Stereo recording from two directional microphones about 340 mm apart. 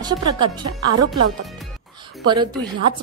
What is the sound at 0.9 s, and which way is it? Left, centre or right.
Speech, right.